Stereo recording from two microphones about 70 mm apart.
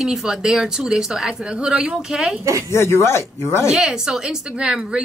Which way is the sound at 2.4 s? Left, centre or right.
Right.